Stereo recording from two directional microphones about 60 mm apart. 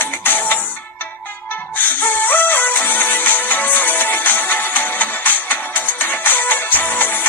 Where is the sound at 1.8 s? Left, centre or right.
Left.